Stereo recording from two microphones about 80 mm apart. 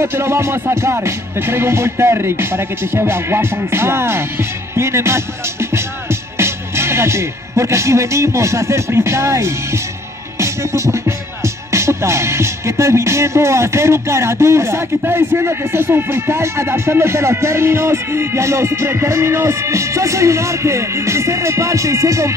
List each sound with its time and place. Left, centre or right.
0.0 s music: right